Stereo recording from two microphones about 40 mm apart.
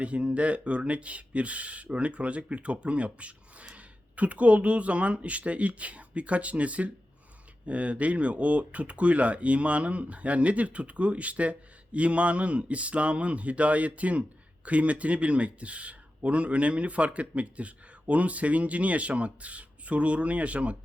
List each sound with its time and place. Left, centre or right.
0.0 s speech: right